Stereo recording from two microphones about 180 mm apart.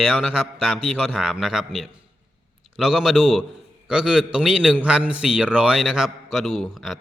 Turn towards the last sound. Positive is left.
turn(degrees=0)  # may be behind; listen again after turning